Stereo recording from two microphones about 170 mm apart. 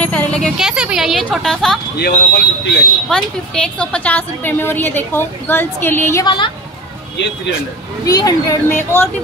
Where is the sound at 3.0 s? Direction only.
5° left (ahead or behind).